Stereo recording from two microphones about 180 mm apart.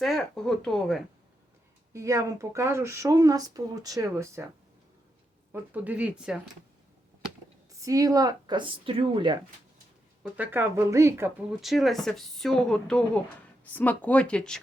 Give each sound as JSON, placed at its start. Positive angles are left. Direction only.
{"t": 0.0, "sound": "a woman's voice", "side_deg": 0}
{"t": 1.9, "sound": "speech", "side_deg": -15}
{"t": 5.5, "sound": "speech", "side_deg": -10}
{"t": 7.8, "sound": "speech", "side_deg": -20}
{"t": 10.3, "sound": "speech", "side_deg": -10}
{"t": 11.6, "sound": "speech", "side_deg": 0}